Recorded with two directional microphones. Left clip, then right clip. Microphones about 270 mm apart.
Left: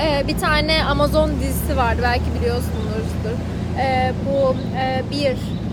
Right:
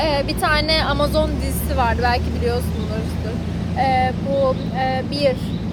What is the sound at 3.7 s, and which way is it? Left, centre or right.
A woman's voice, centre.